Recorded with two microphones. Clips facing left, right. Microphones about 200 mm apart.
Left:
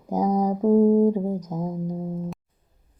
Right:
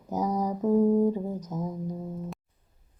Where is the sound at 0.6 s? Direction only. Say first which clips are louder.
Left 5 dB; 35° left (ahead or behind).